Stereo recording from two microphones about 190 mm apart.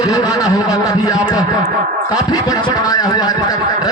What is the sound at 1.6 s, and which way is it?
Speech, 50° right (ahead or behind).